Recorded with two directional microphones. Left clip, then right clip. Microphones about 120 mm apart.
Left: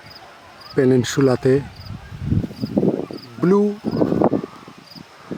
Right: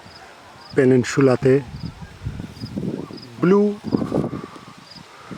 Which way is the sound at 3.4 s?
5° left (ahead or behind).